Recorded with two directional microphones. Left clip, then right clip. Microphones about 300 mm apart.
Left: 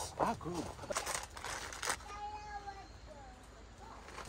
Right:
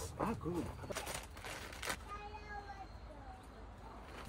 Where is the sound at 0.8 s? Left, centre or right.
Left.